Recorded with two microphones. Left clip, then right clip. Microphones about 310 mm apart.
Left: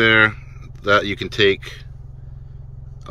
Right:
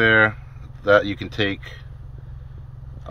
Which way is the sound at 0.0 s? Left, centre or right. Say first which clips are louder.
Left 2 dB; right.